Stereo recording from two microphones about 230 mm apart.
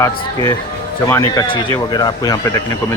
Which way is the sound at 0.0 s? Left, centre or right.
Centre.